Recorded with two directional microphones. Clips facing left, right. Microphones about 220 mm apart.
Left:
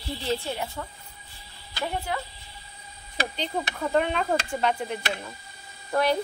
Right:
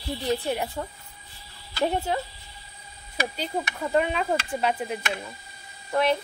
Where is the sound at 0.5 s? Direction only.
20° right (ahead or behind).